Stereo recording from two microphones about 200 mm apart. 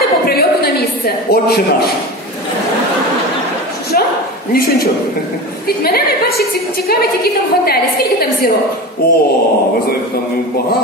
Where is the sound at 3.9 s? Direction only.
45° left (ahead or behind).